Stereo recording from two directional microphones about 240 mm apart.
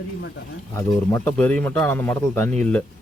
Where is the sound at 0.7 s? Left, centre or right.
Centre.